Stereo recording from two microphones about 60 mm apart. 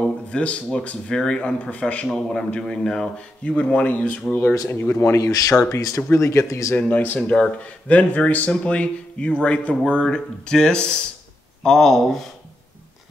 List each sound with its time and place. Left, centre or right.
0.0 s a sound: centre
0.7 s speech: centre
3.4 s speech: centre
4.6 s speech: left
4.9 s speech: left
5.2 s speech: left
6.1 s speech: left
6.9 s speech: left; by 12.3 s centre